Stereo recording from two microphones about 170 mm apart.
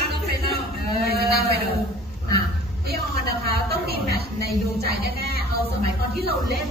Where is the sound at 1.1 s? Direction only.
70° right (ahead or behind).